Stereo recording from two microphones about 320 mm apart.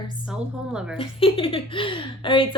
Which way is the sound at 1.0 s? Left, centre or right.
Centre.